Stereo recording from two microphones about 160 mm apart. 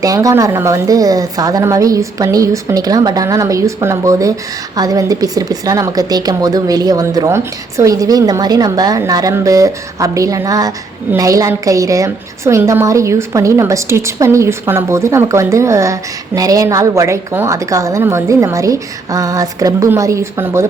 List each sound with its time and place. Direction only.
0.0 s a woman's voice: 20° right (ahead or behind)